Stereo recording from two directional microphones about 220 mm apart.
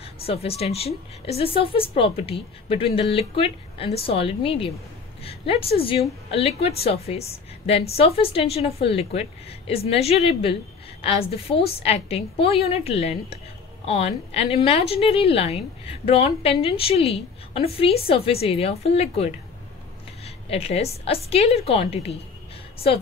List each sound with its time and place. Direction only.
0.0 s a woman's voice: 25° left (ahead or behind)